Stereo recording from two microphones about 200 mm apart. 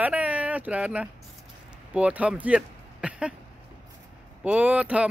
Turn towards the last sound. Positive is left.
turn(degrees=-5)  # may be behind; listen again after turning